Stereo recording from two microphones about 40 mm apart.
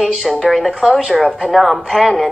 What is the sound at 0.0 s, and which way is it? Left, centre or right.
A woman's voice, centre.